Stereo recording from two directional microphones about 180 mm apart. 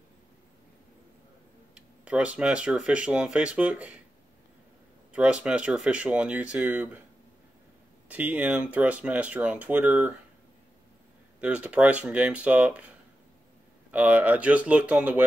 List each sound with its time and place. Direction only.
1.8 s speech: 5° right (ahead or behind)
5.1 s speech: 5° right (ahead or behind)
8.1 s speech: 10° right (ahead or behind)
11.4 s speech: 5° right (ahead or behind)
13.9 s speech: 10° right (ahead or behind)